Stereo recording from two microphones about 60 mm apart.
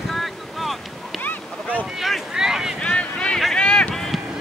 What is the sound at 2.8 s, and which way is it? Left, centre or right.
Boat, centre.